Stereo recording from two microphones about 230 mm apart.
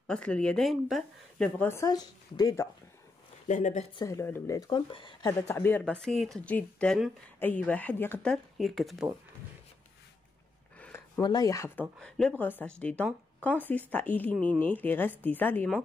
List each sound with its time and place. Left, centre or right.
0.0 s a woman's voice: centre
3.4 s speech: left
4.0 s speech: centre
10.8 s a sound: centre
11.2 s speech: centre